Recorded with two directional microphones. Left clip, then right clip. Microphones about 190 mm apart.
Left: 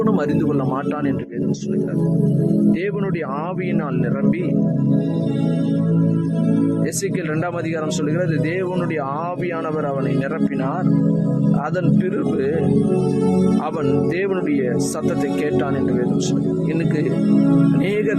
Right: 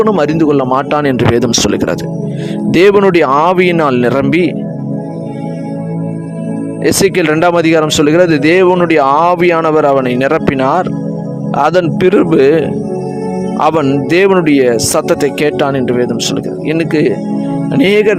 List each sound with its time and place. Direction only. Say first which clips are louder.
0.0 s speech: right 10 dB; 45° right (ahead or behind)
2.7 s speech: right 17 dB; 60° right (ahead or behind)
6.8 s speech: right 14 dB; 55° right (ahead or behind)